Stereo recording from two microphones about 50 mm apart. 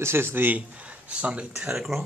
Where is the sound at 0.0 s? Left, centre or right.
Right.